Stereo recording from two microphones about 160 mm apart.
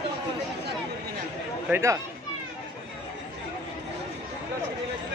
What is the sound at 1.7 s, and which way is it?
Speech, 20° right (ahead or behind).